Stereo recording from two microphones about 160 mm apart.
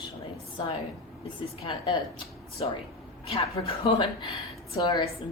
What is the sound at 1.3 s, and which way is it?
A woman's voice, 35° left (ahead or behind).